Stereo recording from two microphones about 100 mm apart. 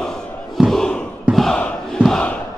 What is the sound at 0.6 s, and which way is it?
Crowd, 5° right (ahead or behind).